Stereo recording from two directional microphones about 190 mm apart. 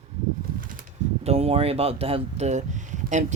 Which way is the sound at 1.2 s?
30° right (ahead or behind).